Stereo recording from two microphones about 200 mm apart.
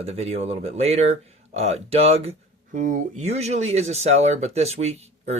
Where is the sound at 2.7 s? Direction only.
40° right (ahead or behind).